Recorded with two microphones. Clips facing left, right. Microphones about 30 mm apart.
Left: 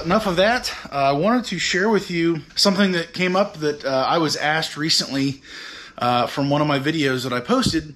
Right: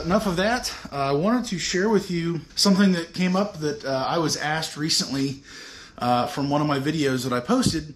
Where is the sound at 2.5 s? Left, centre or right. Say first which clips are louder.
Right 2 dB; left.